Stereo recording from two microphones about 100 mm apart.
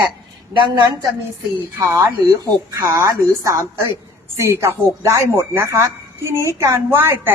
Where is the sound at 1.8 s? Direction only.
30° right (ahead or behind).